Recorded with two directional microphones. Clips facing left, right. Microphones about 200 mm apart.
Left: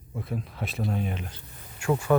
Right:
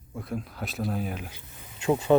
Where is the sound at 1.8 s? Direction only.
20° right (ahead or behind).